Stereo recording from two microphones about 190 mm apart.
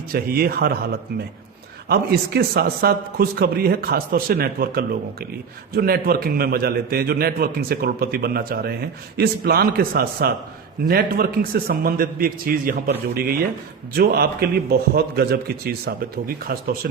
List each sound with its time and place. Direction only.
0.1 s a man's voice: 50° right (ahead or behind)
1.9 s a man's voice: 55° right (ahead or behind)